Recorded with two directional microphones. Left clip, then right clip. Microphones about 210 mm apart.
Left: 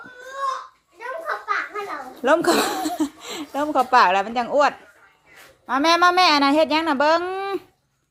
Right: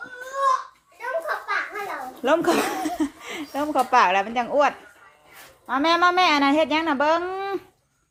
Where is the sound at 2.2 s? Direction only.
15° left (ahead or behind).